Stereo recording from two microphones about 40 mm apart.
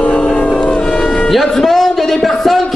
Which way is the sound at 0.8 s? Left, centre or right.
Centre.